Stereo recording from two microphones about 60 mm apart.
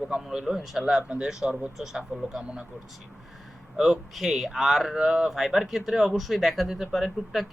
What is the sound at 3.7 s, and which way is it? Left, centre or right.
Speech, centre.